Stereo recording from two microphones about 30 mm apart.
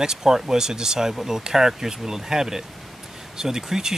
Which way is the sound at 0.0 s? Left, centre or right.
Centre.